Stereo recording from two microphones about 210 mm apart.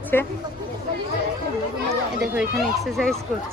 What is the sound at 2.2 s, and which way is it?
Speech, centre (ahead or behind).